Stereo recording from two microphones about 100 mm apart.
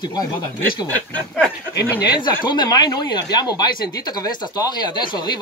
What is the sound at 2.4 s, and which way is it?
Speech, 50° left (ahead or behind).